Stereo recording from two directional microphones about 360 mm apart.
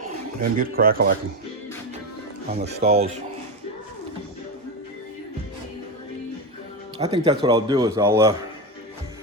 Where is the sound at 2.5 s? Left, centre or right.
Centre.